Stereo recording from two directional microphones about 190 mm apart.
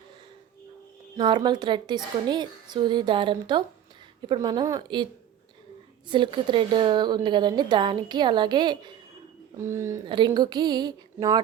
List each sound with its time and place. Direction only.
1.1 s speech: 25° right (ahead or behind)
6.1 s speech: 25° right (ahead or behind)